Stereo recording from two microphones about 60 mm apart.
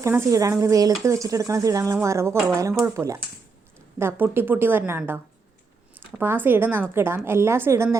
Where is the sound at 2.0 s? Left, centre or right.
Right.